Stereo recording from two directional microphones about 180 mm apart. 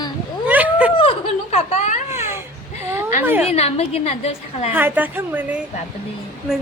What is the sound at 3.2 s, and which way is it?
Speech, 10° right (ahead or behind).